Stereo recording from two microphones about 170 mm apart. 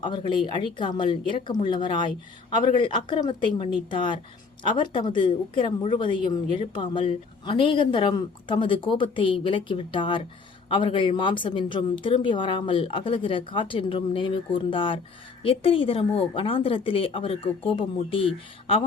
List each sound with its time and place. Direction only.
0.0 s a woman's voice: 25° left (ahead or behind)